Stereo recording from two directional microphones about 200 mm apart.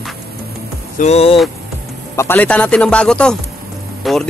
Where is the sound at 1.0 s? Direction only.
30° left (ahead or behind).